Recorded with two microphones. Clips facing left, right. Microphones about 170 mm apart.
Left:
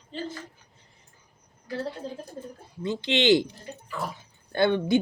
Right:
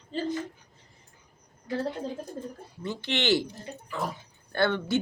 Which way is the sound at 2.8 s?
20° left (ahead or behind).